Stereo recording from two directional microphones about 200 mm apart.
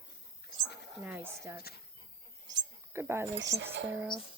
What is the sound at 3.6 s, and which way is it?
Speech, 65° right (ahead or behind).